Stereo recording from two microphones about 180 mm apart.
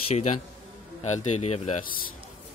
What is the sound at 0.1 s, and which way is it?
A man's voice, 40° left (ahead or behind).